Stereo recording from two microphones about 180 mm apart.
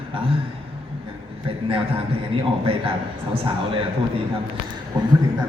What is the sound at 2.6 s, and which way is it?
Speech, 30° right (ahead or behind).